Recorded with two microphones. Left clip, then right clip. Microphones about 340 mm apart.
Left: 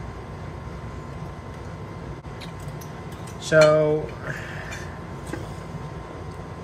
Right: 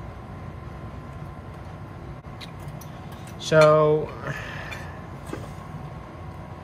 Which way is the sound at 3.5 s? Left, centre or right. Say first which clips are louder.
Even; right.